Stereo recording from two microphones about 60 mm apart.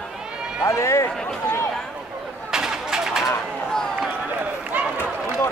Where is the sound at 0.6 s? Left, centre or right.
Left.